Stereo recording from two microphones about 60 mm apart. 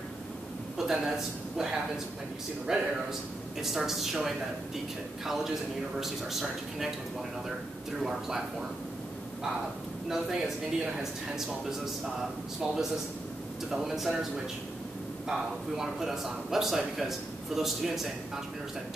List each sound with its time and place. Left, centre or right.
0.7 s speech: centre
8.0 s speech: centre
10.0 s speech: centre
13.7 s speech: centre